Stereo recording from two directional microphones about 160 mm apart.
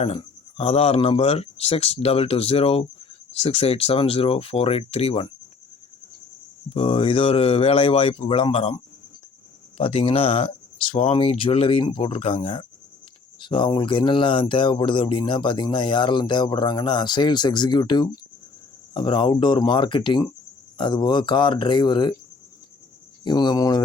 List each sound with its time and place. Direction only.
0.0 s speech: 40° left (ahead or behind)
6.7 s speech: 35° left (ahead or behind)
23.2 s speech: 25° left (ahead or behind)